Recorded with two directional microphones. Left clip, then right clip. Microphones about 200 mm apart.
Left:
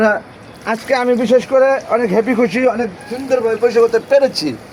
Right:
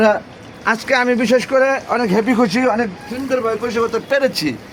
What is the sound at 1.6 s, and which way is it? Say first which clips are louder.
Speech: left 3 dB; 25° right (ahead or behind).